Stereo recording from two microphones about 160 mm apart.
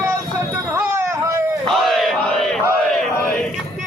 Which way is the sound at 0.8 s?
15° right (ahead or behind).